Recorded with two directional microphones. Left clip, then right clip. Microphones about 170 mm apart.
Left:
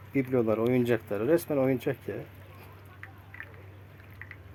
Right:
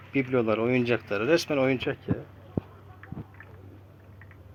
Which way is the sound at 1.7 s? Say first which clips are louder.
Right 1 dB; 30° left (ahead or behind).